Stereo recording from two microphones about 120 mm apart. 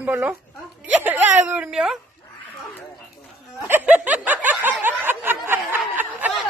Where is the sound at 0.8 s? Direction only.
15° right (ahead or behind).